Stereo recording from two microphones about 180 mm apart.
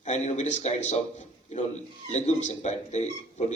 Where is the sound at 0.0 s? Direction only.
40° left (ahead or behind).